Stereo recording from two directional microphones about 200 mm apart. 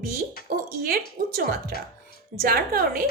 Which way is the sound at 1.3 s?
45° right (ahead or behind).